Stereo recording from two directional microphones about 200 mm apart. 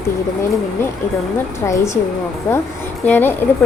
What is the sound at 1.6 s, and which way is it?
Speech, 15° left (ahead or behind).